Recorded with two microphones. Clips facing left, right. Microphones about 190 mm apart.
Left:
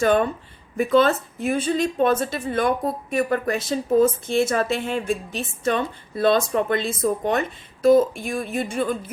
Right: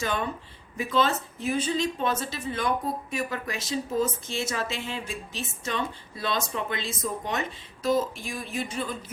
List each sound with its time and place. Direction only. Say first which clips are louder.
0.0 s a woman's voice: left 10 dB; 55° left (ahead or behind)